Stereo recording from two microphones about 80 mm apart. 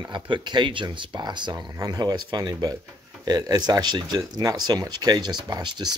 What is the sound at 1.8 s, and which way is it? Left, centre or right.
Speech, right.